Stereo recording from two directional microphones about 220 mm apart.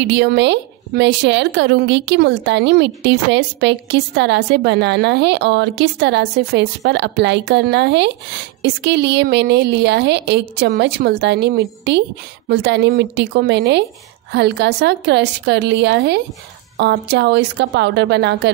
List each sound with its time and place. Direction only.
0.1 s a woman's voice: 50° right (ahead or behind)